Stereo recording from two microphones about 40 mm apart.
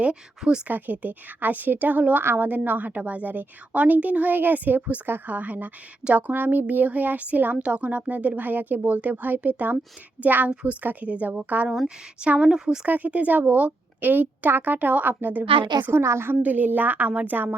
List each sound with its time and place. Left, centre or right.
0.0 s speech: right
0.7 s a woman's voice: right
5.0 s a woman's voice: right
5.3 s a woman's voice: right
11.0 s speech: right
12.5 s speech: centre
12.8 s a woman's voice: right
15.9 s a woman's voice: right
16.4 s a woman's voice: right
17.1 s speech: right
17.3 s a woman's voice: right